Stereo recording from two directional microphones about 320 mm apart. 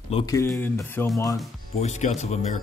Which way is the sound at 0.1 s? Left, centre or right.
Centre.